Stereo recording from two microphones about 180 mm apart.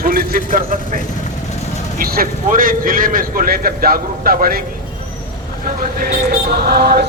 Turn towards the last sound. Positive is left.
turn(degrees=-60)  # may be behind; listen again after turning